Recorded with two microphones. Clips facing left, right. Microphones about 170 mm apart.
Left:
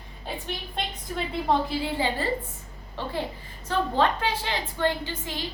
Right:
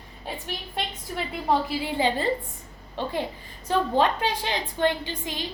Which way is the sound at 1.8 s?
15° right (ahead or behind).